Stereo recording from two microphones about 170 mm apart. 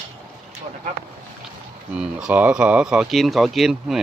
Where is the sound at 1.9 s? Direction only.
5° right (ahead or behind).